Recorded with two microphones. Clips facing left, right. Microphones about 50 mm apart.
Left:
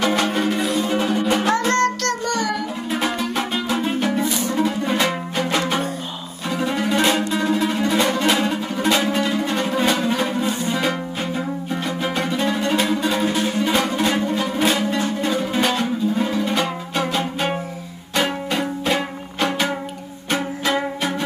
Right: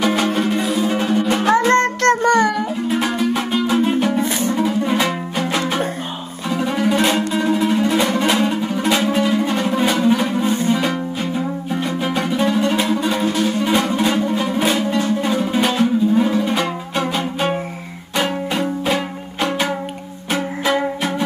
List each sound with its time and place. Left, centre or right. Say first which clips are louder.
0.0 s music: right 2 dB; centre
1.3 s music: right 6 dB; centre; by 2.5 s right
2.9 s music: right 3 dB; centre
4.2 s music: right 3 dB; right
4.6 s music: right 2 dB; centre
6.5 s music: right 3 dB; centre
10.4 s music: right 4 dB; right
10.7 s music: right 3 dB; centre
13.3 s music: right 3 dB; centre
13.6 s music: right 2 dB; centre
18.1 s music: right 1 dB; centre